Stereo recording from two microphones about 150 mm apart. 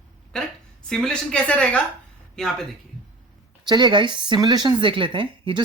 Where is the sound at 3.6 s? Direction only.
30° right (ahead or behind).